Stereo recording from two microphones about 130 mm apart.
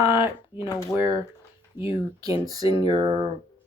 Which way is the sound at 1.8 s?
25° right (ahead or behind).